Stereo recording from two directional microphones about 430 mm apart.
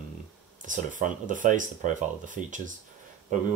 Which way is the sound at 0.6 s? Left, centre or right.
Centre.